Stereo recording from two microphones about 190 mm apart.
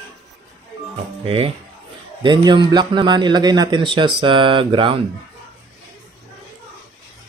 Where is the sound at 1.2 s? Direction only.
30° right (ahead or behind).